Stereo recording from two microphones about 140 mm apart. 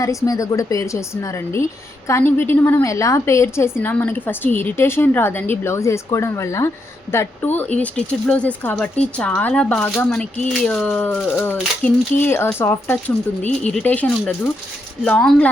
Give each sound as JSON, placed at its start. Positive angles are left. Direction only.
{"t": 0.0, "sound": "a woman's voice", "side_deg": 25}
{"t": 13.4, "sound": "speech", "side_deg": 55}
{"t": 13.7, "sound": "a woman's voice", "side_deg": 10}